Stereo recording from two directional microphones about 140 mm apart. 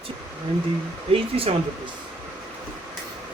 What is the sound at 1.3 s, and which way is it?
Speech, 40° right (ahead or behind).